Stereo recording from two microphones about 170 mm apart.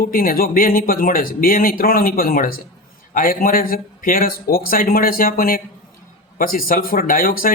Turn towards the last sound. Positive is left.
turn(degrees=55)  # may be behind; listen again after turning